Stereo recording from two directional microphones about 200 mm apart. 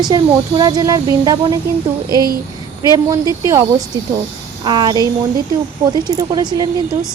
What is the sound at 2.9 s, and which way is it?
Speech, 15° right (ahead or behind).